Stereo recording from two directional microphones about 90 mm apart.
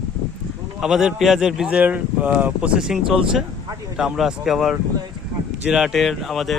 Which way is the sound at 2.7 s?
5° right (ahead or behind).